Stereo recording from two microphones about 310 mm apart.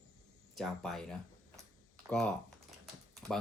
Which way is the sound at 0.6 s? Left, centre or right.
Centre.